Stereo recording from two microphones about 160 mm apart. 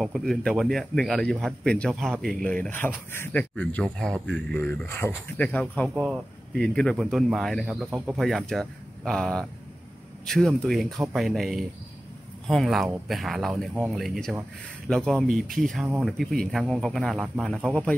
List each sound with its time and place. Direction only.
0.0 s a man's voice: centre (ahead or behind)